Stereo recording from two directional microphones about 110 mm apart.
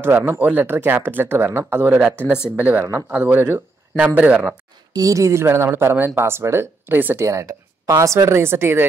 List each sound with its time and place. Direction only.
0.0 s speech: 20° right (ahead or behind)
4.9 s speech: 30° right (ahead or behind)